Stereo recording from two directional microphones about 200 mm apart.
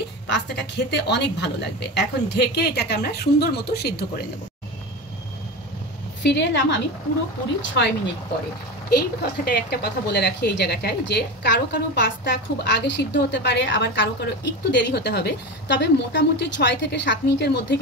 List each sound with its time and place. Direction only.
0.3 s speech: 60° left (ahead or behind)
6.2 s speech: 65° left (ahead or behind)
8.9 s speech: 50° left (ahead or behind)